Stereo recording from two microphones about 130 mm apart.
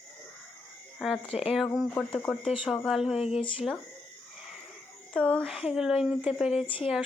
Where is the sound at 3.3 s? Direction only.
45° left (ahead or behind).